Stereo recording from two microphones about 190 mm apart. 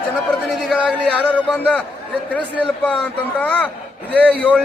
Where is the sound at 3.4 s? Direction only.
5° left (ahead or behind).